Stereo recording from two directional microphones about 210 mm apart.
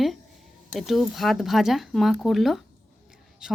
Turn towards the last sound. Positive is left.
turn(degrees=-5)  # may be behind; listen again after turning